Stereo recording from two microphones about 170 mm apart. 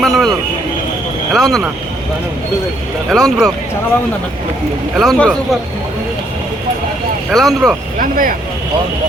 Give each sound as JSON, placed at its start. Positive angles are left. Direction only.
{"t": 0.0, "sound": "a sound", "side_deg": 0}
{"t": 1.3, "sound": "speech", "side_deg": 0}
{"t": 3.1, "sound": "speech", "side_deg": 0}
{"t": 4.9, "sound": "speech", "side_deg": 0}
{"t": 7.3, "sound": "speech", "side_deg": 0}
{"t": 7.9, "sound": "speech", "side_deg": -50}